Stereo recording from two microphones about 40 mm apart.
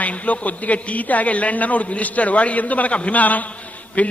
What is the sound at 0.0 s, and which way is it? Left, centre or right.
A man's voice, left.